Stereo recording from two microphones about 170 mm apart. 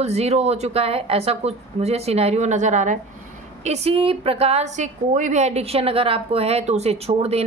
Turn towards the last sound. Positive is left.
turn(degrees=-35)  # may be behind; listen again after turning